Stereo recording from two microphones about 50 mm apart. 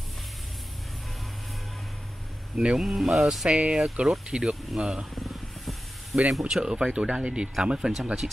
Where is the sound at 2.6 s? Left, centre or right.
Centre.